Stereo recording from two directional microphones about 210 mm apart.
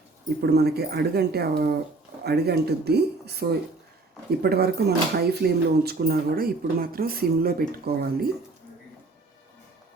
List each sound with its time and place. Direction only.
0.4 s speech: 50° right (ahead or behind)